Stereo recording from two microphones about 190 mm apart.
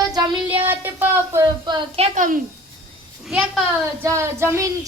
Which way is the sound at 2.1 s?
45° right (ahead or behind).